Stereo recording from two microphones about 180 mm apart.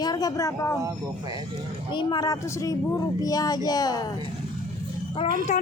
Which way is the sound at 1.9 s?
20° left (ahead or behind).